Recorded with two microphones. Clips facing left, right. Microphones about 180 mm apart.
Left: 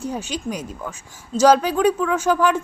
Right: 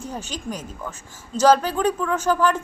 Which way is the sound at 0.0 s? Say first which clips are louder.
Left 5 dB; 10° left (ahead or behind).